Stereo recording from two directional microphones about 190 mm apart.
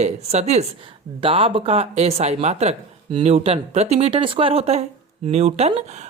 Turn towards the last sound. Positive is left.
turn(degrees=-35)  # may be behind; listen again after turning